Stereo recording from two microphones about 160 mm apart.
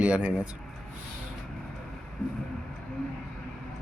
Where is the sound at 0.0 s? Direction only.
5° right (ahead or behind).